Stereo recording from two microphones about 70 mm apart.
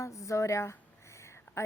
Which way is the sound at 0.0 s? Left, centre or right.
Left.